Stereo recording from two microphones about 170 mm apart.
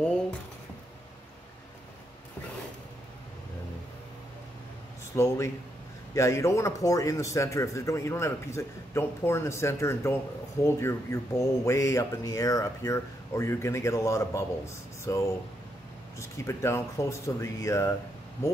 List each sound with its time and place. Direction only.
5.1 s a man's voice: 15° left (ahead or behind)